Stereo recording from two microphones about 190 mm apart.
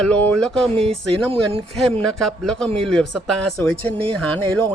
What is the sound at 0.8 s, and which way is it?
Speech, 30° right (ahead or behind).